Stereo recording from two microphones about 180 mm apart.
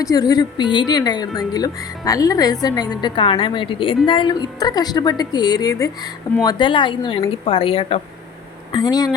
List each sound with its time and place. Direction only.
0.0 s a woman's voice: 20° left (ahead or behind)
8.7 s a woman's voice: 20° left (ahead or behind)